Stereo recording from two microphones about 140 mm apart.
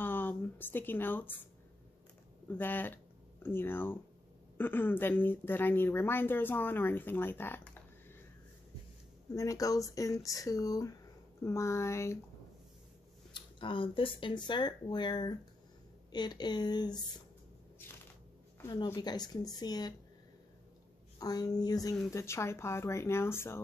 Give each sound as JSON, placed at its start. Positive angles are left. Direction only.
{"t": 0.0, "sound": "a sound", "side_deg": 15}
{"t": 2.5, "sound": "a woman's voice", "side_deg": 15}
{"t": 9.3, "sound": "speech", "side_deg": 25}
{"t": 13.3, "sound": "speech", "side_deg": 35}
{"t": 18.9, "sound": "speech", "side_deg": 30}
{"t": 21.2, "sound": "speech", "side_deg": 25}